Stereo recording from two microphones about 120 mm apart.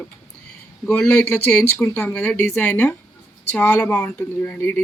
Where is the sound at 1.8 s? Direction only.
20° left (ahead or behind).